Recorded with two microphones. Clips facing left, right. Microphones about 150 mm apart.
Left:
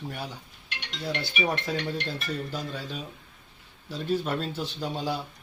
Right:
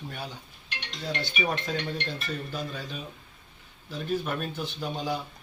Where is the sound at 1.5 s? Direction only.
15° left (ahead or behind).